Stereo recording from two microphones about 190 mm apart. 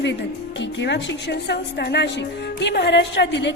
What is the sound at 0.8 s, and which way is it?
A woman's voice, 65° left (ahead or behind).